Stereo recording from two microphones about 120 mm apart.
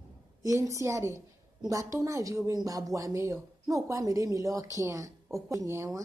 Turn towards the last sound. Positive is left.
turn(degrees=-25)  # may be behind; listen again after turning